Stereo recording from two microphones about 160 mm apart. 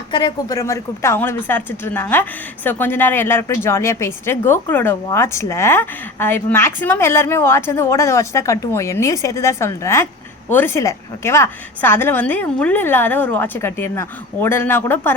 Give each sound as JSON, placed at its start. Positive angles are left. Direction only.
{"t": 0.1, "sound": "a woman's voice", "side_deg": 25}